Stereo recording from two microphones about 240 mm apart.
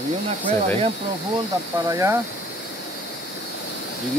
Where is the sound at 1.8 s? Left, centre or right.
Centre.